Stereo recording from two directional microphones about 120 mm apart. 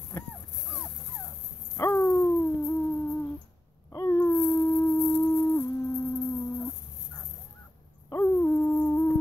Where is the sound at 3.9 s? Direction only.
20° left (ahead or behind).